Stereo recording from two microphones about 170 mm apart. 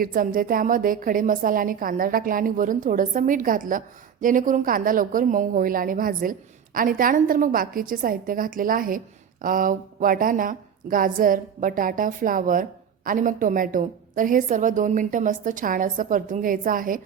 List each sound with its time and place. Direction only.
0.0 s a woman's voice: 55° right (ahead or behind)